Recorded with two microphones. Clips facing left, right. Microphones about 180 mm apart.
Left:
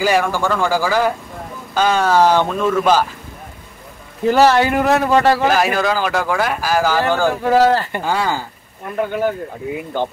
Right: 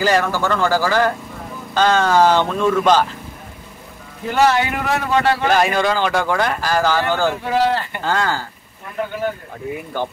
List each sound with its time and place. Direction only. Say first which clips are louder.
0.0 s speech: left 1 dB; 10° left (ahead or behind)
4.3 s a man's voice: left 4 dB; 35° left (ahead or behind)
5.5 s speech: even; 5° left (ahead or behind)
7.4 s a man's voice: left 5 dB; 45° left (ahead or behind)
8.0 s speech: left 1 dB; 10° left (ahead or behind)
9.9 s speech: left 3 dB; 20° left (ahead or behind)